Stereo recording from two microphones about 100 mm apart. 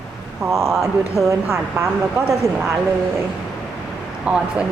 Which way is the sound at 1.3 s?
30° right (ahead or behind).